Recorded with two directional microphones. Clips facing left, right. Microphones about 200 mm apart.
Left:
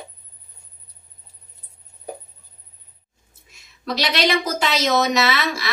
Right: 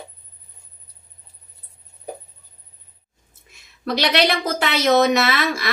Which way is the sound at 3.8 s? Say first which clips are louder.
Right 3 dB; 55° right (ahead or behind).